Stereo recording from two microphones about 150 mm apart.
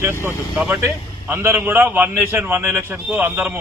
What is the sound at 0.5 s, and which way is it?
A man's voice, 5° right (ahead or behind).